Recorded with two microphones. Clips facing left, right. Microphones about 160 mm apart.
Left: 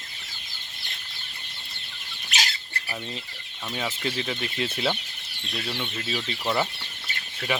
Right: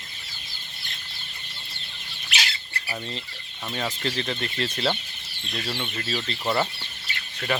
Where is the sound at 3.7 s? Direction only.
5° left (ahead or behind).